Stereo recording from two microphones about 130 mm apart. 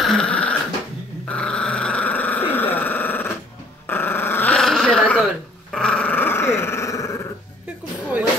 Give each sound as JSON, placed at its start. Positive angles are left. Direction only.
{"t": 0.0, "sound": "dog", "side_deg": 5}
{"t": 1.3, "sound": "growling", "side_deg": 5}
{"t": 3.8, "sound": "dog", "side_deg": 15}